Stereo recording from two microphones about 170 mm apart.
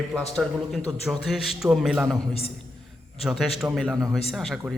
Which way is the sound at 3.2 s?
Centre (ahead or behind).